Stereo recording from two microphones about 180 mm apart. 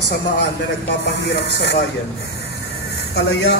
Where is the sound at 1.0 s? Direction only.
75° left (ahead or behind).